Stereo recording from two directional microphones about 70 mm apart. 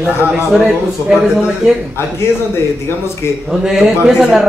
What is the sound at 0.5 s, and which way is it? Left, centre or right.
Speech, centre.